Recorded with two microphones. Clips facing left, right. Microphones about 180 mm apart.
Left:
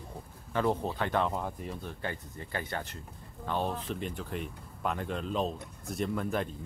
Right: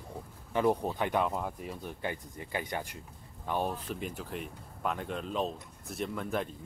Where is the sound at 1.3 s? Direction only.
5° right (ahead or behind).